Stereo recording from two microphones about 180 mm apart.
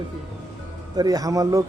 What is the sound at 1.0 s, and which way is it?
Speech, 20° right (ahead or behind).